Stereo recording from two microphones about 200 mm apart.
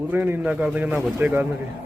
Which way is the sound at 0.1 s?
10° right (ahead or behind).